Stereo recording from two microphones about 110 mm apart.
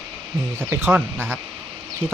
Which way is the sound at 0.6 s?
20° right (ahead or behind).